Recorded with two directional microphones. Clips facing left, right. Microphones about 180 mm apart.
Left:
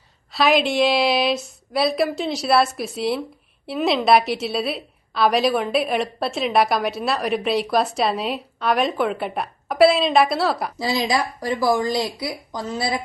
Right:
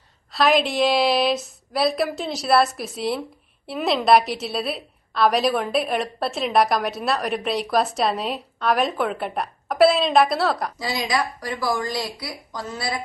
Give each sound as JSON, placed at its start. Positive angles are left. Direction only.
{"t": 0.3, "sound": "a woman's voice", "side_deg": 0}
{"t": 10.8, "sound": "a woman's voice", "side_deg": 25}
{"t": 12.2, "sound": "a woman's voice", "side_deg": 20}